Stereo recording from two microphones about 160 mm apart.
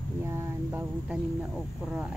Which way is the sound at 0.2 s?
15° right (ahead or behind).